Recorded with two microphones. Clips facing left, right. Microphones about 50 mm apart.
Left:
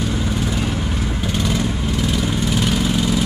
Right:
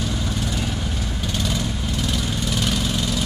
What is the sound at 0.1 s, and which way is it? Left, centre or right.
Vehicle, centre.